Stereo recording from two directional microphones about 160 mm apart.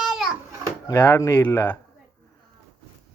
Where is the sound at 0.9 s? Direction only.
15° left (ahead or behind).